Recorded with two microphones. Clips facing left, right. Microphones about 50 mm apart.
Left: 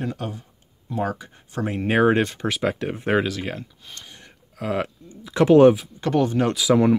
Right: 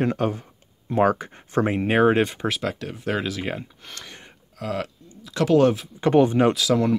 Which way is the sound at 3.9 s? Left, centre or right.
Right.